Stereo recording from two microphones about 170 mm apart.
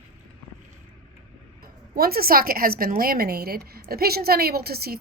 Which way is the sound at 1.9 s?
60° right (ahead or behind).